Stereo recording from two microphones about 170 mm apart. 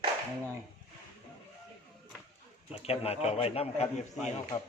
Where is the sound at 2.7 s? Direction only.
35° left (ahead or behind).